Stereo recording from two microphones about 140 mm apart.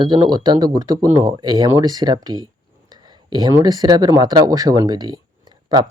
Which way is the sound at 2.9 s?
30° right (ahead or behind).